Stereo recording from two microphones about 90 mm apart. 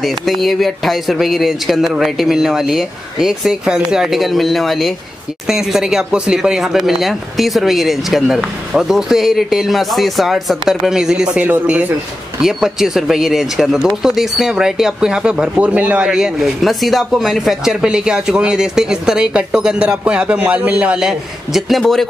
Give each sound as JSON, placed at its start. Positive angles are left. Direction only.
{"t": 0.0, "sound": "speech", "side_deg": 0}
{"t": 11.4, "sound": "speech", "side_deg": -20}
{"t": 12.4, "sound": "speech", "side_deg": -5}